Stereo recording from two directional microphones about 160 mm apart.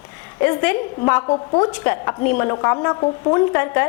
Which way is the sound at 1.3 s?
25° left (ahead or behind).